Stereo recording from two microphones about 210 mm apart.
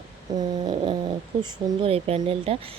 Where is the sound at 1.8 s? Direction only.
30° right (ahead or behind).